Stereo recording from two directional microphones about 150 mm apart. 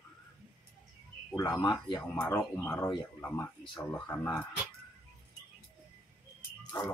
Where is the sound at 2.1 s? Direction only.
10° left (ahead or behind).